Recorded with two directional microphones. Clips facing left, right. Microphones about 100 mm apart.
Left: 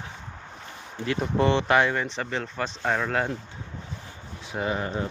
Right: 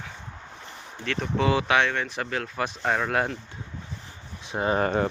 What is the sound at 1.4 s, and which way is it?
Speech, centre (ahead or behind).